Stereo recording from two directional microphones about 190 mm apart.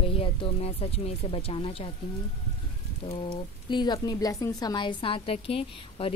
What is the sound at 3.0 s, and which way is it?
Speech, 25° left (ahead or behind).